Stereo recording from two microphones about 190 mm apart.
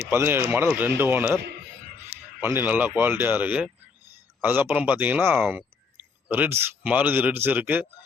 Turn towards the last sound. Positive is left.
turn(degrees=-10)  # may be behind; listen again after turning